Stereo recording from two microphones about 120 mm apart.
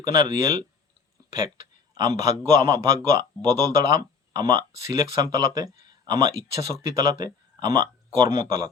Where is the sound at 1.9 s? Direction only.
30° right (ahead or behind).